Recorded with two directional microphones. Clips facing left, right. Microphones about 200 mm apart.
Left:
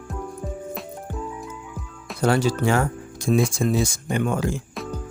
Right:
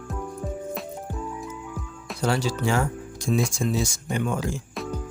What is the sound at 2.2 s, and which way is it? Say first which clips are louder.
Speech: left 4 dB; 55° left (ahead or behind).